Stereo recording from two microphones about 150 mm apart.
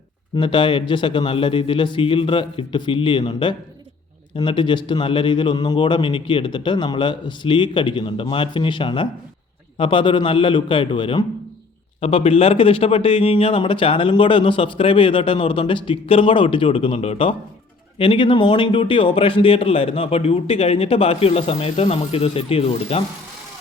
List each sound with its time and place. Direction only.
0.3 s speech: 35° left (ahead or behind)